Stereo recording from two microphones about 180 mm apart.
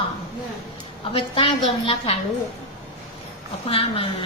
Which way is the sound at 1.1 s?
30° left (ahead or behind).